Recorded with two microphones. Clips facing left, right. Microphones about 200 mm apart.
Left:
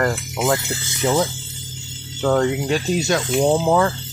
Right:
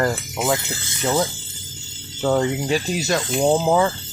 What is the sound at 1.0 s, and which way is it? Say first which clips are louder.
Speech: left 2 dB; 5° left (ahead or behind).